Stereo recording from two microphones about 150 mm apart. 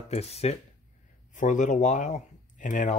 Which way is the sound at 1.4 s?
55° left (ahead or behind).